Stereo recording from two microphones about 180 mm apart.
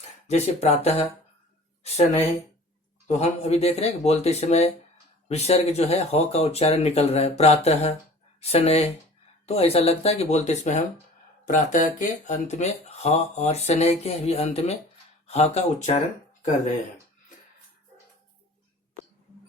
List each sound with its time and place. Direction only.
0.3 s speech: 35° left (ahead or behind)
3.1 s speech: 35° left (ahead or behind)